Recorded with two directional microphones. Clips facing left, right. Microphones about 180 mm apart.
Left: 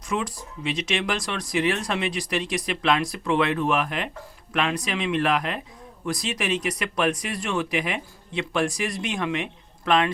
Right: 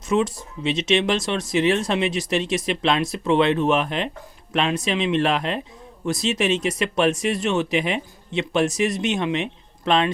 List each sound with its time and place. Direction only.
0.1 s speech: 25° right (ahead or behind)